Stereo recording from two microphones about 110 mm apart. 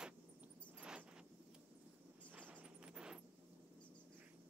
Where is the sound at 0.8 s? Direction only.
10° right (ahead or behind).